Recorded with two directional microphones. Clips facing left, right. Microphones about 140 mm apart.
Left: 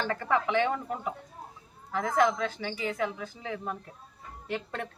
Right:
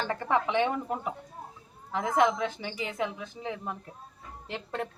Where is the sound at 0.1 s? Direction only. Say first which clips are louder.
Right 1 dB; 25° right (ahead or behind).